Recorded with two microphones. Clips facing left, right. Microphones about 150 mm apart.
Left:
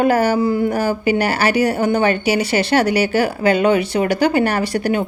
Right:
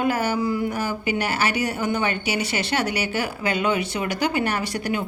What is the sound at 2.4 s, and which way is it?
Speech, 35° left (ahead or behind).